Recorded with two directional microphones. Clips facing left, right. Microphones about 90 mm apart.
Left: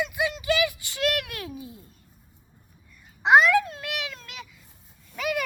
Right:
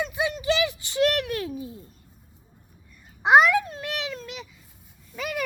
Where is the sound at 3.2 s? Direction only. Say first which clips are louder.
Even; 20° right (ahead or behind).